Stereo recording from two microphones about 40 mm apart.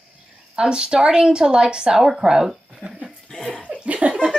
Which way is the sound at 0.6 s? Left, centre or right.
Right.